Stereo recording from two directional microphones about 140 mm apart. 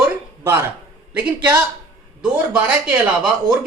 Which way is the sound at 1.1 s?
10° right (ahead or behind).